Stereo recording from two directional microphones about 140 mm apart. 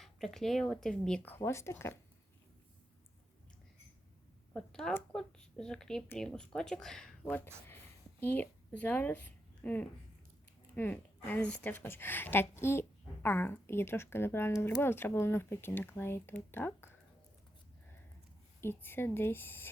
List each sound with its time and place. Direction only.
0.0 s speech: centre (ahead or behind); by 2.0 s 20° left (ahead or behind)
4.5 s speech: 5° left (ahead or behind)
18.6 s speech: 15° left (ahead or behind)